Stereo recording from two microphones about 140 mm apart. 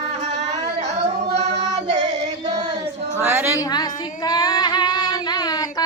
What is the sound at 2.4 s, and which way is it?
Child singing, 35° right (ahead or behind).